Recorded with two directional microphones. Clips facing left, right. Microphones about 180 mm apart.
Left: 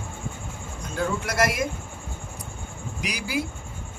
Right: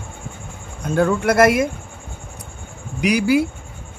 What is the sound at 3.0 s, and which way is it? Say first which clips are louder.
Speech: right 15 dB; 65° right (ahead or behind).